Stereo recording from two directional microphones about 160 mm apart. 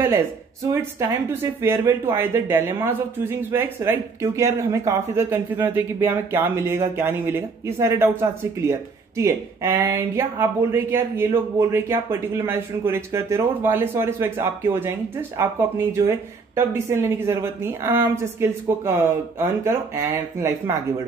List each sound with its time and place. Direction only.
0.7 s speech: 20° right (ahead or behind)